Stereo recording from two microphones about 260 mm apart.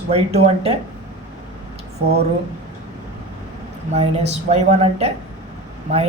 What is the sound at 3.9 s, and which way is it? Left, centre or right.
A woman's voice, right.